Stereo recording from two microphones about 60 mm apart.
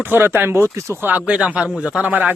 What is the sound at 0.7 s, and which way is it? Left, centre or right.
Speech, right.